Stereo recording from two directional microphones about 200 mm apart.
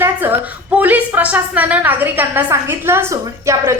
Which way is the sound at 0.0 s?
10° right (ahead or behind).